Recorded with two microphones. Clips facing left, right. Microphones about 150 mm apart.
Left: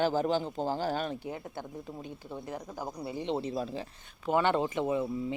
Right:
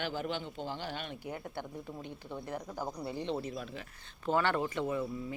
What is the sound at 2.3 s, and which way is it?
Speech, 15° left (ahead or behind).